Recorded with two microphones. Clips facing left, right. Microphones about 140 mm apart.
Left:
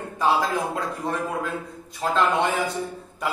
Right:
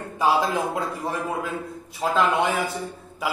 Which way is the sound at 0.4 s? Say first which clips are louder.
Right 1 dB; 20° right (ahead or behind).